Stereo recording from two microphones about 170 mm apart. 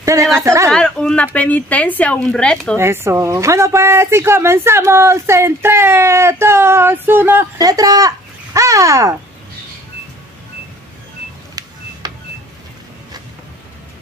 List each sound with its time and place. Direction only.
0.0 s a woman's voice: 20° right (ahead or behind)
0.7 s speech: 5° left (ahead or behind)
2.8 s a woman's voice: 15° right (ahead or behind)
12.0 s printer: 25° right (ahead or behind)